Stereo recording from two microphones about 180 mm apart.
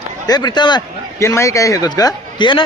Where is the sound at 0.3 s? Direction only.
25° left (ahead or behind).